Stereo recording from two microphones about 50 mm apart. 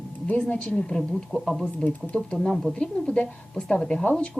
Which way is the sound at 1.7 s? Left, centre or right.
Left.